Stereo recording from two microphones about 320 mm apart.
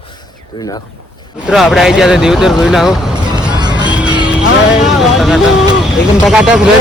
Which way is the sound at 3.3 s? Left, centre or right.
Centre.